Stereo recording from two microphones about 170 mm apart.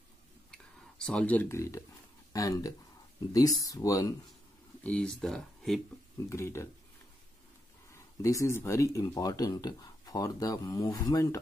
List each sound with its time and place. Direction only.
0.9 s speech: 5° left (ahead or behind)
4.8 s speech: 5° left (ahead or behind)
6.2 s speech: 15° left (ahead or behind)
7.9 s speech: 20° left (ahead or behind)